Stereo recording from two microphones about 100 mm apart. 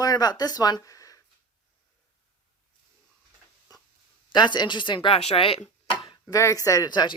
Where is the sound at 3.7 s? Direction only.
40° left (ahead or behind).